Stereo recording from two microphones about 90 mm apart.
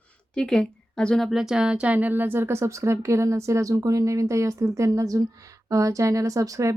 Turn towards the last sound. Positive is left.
turn(degrees=-40)  # may be behind; listen again after turning